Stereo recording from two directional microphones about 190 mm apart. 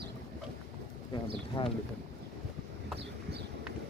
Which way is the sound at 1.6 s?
30° left (ahead or behind).